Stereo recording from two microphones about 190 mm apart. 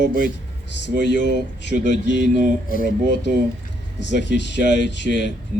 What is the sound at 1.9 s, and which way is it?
Speech, 65° left (ahead or behind).